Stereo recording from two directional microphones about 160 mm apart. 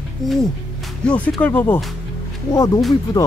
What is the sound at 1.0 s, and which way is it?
Speech, 10° left (ahead or behind).